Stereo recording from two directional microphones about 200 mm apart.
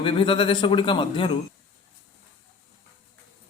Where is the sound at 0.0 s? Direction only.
25° left (ahead or behind).